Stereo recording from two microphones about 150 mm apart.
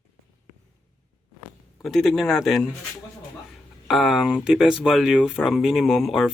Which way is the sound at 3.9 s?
Centre (ahead or behind).